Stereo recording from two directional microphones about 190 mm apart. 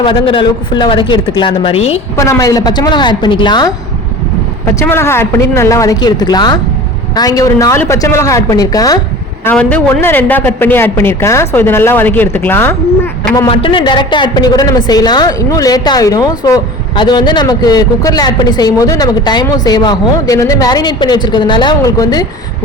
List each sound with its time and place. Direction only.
0.0 s a woman's voice: 25° left (ahead or behind)
2.1 s a woman's voice: 15° left (ahead or behind)
4.7 s a man's voice: 15° left (ahead or behind)
9.4 s a man's voice: 10° left (ahead or behind)
13.3 s a woman's voice: 25° left (ahead or behind)